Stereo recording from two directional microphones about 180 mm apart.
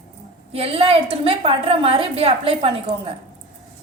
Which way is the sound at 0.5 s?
35° right (ahead or behind).